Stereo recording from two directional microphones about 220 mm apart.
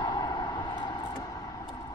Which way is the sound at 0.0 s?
20° left (ahead or behind).